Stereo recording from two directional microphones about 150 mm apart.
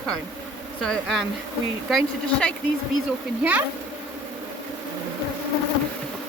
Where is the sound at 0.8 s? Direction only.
5° left (ahead or behind).